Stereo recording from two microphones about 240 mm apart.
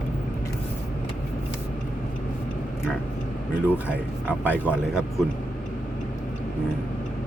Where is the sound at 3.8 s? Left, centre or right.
Centre.